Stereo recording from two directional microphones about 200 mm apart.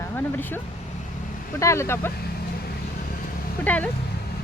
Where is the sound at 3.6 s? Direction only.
10° left (ahead or behind).